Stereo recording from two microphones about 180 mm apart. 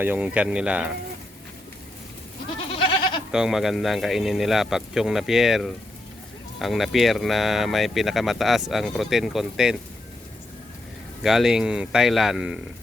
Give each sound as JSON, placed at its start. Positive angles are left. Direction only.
{"t": 0.0, "sound": "speech", "side_deg": -10}
{"t": 2.7, "sound": "goat", "side_deg": 30}
{"t": 3.3, "sound": "speech", "side_deg": 0}
{"t": 11.2, "sound": "speech", "side_deg": 0}